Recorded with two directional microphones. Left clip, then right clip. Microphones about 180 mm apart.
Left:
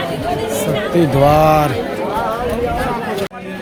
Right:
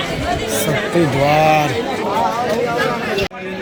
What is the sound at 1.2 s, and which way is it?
Speech, 30° left (ahead or behind).